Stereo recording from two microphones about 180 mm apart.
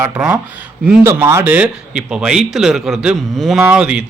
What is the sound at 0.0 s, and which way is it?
Speech, 15° right (ahead or behind).